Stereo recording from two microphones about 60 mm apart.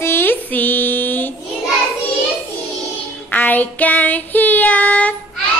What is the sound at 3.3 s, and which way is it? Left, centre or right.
Child singing, left.